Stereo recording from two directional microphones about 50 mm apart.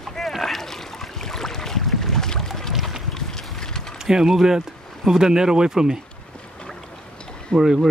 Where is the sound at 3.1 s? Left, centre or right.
Centre.